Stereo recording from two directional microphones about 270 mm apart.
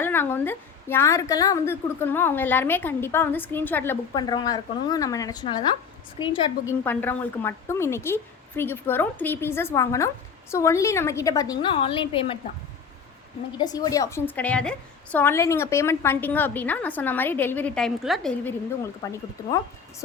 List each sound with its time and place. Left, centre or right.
0.0 s a woman's voice: centre
6.8 s a woman's voice: centre
13.6 s a woman's voice: centre